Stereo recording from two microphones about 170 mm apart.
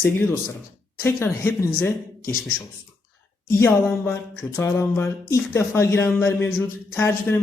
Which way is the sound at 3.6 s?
15° left (ahead or behind).